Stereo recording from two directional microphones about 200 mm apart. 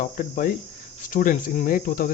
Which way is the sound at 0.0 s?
40° left (ahead or behind).